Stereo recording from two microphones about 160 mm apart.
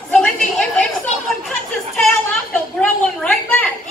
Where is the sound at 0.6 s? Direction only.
5° left (ahead or behind).